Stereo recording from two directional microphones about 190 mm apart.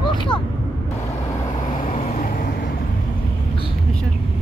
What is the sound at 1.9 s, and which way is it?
Vehicle, 40° left (ahead or behind).